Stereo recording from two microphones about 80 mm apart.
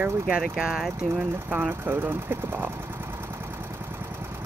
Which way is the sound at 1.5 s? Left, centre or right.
Centre.